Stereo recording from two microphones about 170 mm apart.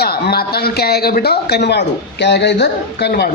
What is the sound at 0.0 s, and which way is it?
A man's voice, 65° left (ahead or behind).